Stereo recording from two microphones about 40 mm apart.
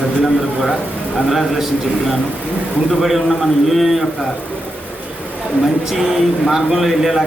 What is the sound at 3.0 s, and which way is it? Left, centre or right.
A man's voice, centre.